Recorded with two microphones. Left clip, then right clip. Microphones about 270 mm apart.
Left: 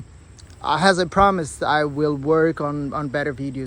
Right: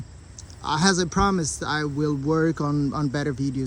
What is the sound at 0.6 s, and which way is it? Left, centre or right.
Speech, centre.